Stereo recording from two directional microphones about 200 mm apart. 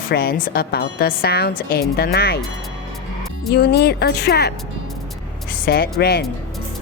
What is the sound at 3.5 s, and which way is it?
Speech, 55° left (ahead or behind).